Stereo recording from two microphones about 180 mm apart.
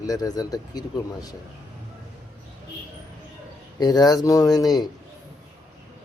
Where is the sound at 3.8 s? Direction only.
20° left (ahead or behind).